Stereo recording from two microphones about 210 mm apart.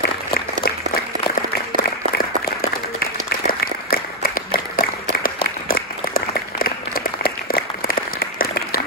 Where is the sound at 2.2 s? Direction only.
45° left (ahead or behind).